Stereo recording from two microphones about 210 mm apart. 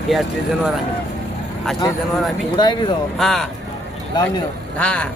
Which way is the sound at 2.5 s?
20° left (ahead or behind).